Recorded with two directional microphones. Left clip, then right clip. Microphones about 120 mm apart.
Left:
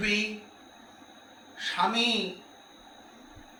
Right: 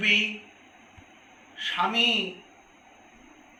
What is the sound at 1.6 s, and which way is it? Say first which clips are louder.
Speech: right 1 dB; 20° left (ahead or behind).